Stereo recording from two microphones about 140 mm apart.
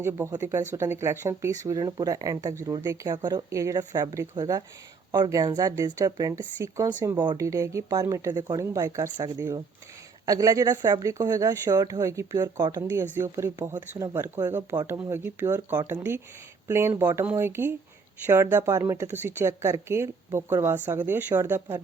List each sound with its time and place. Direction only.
0.0 s speech: 20° right (ahead or behind)
10.2 s speech: 25° right (ahead or behind)